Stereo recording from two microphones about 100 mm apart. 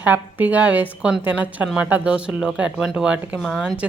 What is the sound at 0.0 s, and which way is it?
Speech, 15° right (ahead or behind).